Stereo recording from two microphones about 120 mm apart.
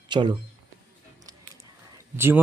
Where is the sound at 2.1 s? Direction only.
20° right (ahead or behind).